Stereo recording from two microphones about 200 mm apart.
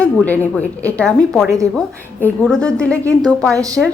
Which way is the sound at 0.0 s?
5° left (ahead or behind).